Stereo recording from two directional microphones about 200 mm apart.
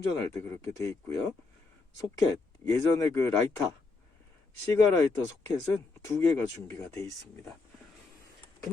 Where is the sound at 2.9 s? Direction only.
15° left (ahead or behind).